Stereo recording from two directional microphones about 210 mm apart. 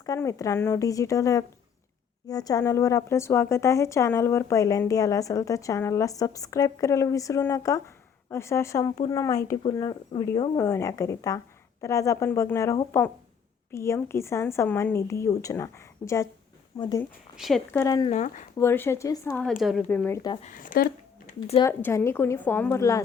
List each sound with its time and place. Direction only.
0.0 s speech: 15° left (ahead or behind)
17.3 s speech: centre (ahead or behind); by 18.1 s 15° left (ahead or behind)
18.1 s speech: 35° left (ahead or behind)
18.5 s speech: 10° left (ahead or behind)
20.4 s speech: 40° left (ahead or behind)
21.6 s speech: 10° left (ahead or behind)